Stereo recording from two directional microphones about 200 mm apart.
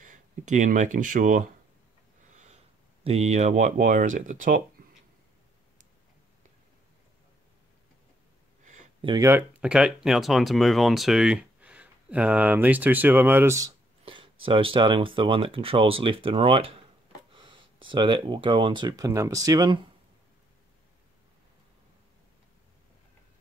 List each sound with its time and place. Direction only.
0.0 s speech: 40° right (ahead or behind)
9.0 s speech: 20° right (ahead or behind)
14.0 s a sound: 25° right (ahead or behind)
14.4 s speech: 25° right (ahead or behind)